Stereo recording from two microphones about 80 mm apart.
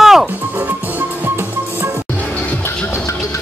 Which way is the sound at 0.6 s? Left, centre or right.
Right.